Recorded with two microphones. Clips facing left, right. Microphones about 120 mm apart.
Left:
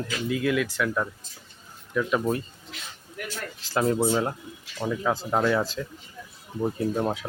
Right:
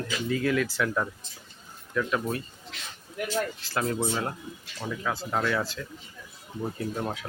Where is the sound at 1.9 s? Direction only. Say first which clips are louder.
Left 3 dB; 15° left (ahead or behind).